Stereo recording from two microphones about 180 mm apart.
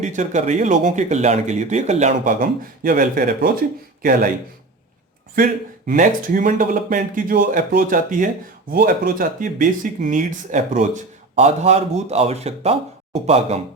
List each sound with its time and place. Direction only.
0.0 s speech: 40° right (ahead or behind)
5.3 s speech: 50° right (ahead or behind)